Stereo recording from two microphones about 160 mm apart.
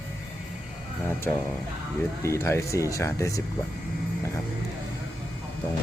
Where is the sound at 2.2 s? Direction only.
15° left (ahead or behind).